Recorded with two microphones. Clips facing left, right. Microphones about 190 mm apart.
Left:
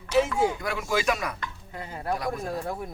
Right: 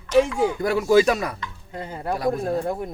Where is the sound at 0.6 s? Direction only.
35° right (ahead or behind).